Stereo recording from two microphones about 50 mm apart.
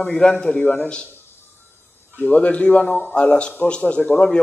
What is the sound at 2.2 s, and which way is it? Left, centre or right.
A man's voice, left.